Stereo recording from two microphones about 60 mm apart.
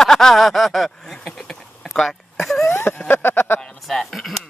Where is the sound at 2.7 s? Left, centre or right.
Left.